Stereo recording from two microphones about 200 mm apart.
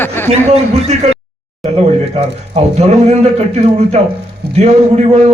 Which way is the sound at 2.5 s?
35° right (ahead or behind).